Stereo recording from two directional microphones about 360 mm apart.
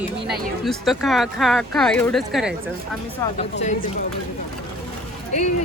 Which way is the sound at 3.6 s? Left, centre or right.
Centre.